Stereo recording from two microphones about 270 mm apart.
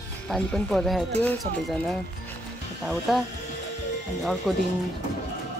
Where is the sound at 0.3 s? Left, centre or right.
Centre.